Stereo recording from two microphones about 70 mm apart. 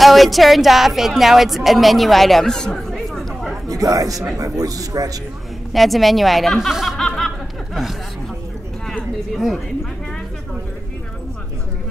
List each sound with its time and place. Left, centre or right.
0.0 s a woman's voice: centre
3.6 s a man's voice: right
5.7 s speech: centre
7.0 s snicker: centre
9.3 s a woman's voice: centre